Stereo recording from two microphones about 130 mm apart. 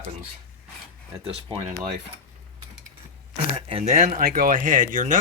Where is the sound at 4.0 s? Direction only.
65° right (ahead or behind); by 5.1 s 85° right.